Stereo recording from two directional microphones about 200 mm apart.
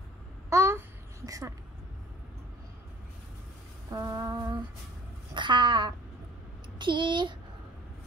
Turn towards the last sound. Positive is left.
turn(degrees=-25)  # may be behind; listen again after turning